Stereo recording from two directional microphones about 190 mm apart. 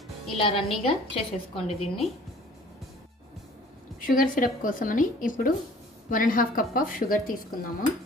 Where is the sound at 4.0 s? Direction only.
45° left (ahead or behind).